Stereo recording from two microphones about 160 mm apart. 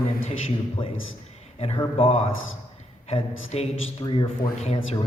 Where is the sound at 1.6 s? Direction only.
35° left (ahead or behind).